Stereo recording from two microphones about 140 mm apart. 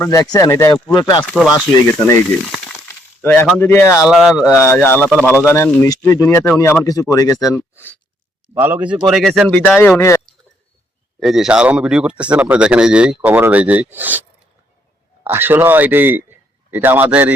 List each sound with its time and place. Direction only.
0.0 s speech: 20° left (ahead or behind)
0.9 s speech: 30° left (ahead or behind)
1.2 s speech: 10° left (ahead or behind)
3.2 s speech: 15° left (ahead or behind)
3.9 s speech: centre (ahead or behind)
4.4 s speech: 20° left (ahead or behind)
8.5 s speech: 15° right (ahead or behind)
9.0 s speech: centre (ahead or behind)
9.6 s speech: 10° left (ahead or behind)
11.2 s a man's voice: 5° right (ahead or behind)